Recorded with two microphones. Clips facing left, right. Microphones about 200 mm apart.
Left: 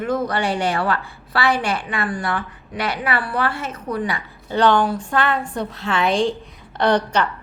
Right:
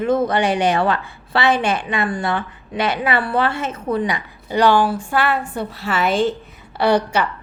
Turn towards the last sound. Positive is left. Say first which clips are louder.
# right 1 dB
turn(degrees=-10)  # may be behind; listen again after turning